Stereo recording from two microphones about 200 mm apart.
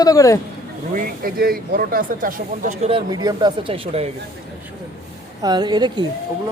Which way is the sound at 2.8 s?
25° right (ahead or behind).